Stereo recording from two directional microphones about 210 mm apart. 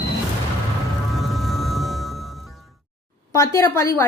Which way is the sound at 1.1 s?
Centre (ahead or behind).